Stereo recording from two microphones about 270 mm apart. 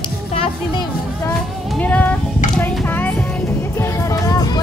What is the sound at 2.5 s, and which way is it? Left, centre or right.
Speech, centre.